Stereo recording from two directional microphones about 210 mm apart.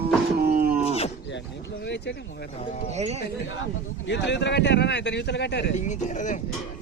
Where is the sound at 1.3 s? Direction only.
55° left (ahead or behind).